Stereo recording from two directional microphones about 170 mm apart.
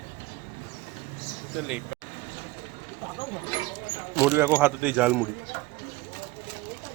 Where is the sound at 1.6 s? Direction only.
5° right (ahead or behind).